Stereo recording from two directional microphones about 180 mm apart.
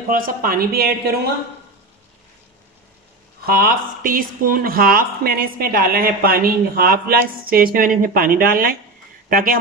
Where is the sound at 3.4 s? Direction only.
55° right (ahead or behind).